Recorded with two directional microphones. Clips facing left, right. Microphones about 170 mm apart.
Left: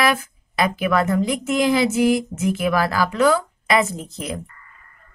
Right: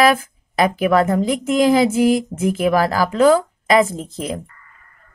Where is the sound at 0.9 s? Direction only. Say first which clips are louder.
Right 3 dB; 35° right (ahead or behind).